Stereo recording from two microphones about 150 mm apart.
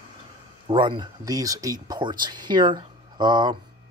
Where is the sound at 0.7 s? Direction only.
35° right (ahead or behind).